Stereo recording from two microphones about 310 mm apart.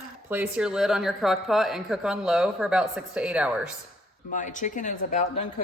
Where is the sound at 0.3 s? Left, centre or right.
Centre.